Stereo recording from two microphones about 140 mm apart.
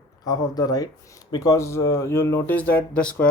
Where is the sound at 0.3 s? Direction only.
25° left (ahead or behind).